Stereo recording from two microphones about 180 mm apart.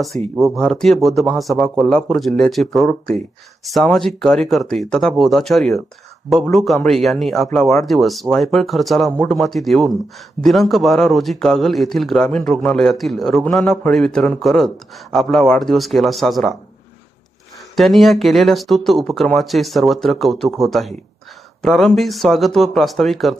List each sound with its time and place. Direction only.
0.1 s speech: 40° right (ahead or behind)
0.5 s a man's voice: 5° left (ahead or behind)
17.7 s a man's voice: centre (ahead or behind)